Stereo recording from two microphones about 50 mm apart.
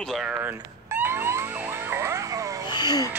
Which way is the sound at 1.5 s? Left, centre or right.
Right.